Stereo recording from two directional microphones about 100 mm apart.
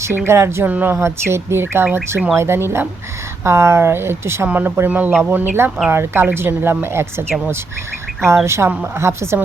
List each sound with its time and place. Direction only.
0.3 s a woman's voice: 25° right (ahead or behind)
8.4 s a woman's voice: 25° right (ahead or behind)